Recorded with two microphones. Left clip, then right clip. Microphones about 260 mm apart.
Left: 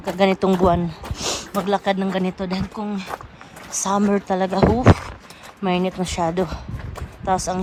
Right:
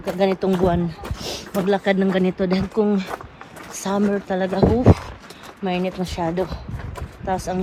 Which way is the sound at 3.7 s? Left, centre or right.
Left.